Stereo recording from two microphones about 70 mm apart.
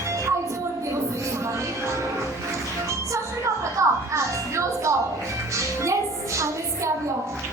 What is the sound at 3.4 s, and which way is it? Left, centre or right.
Music, right.